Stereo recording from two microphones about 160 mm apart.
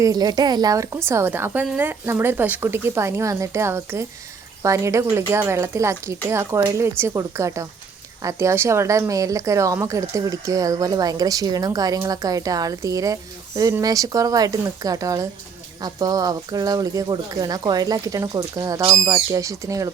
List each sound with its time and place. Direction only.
0.0 s a woman's voice: 25° right (ahead or behind)